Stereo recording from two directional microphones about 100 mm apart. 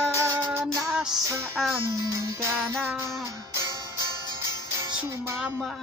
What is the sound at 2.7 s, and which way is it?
Music, 20° right (ahead or behind).